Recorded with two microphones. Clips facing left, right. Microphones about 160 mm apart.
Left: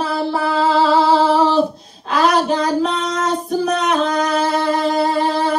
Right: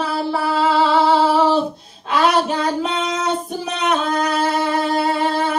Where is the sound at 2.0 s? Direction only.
5° right (ahead or behind).